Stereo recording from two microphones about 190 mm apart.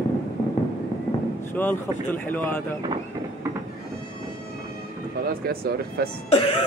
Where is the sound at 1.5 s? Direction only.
10° left (ahead or behind).